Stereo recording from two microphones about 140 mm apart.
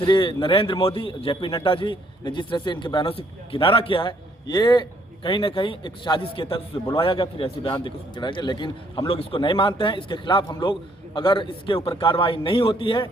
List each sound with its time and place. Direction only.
0.0 s a man's voice: 35° left (ahead or behind)